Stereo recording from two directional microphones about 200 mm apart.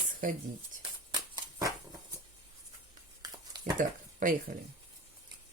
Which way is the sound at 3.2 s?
20° right (ahead or behind).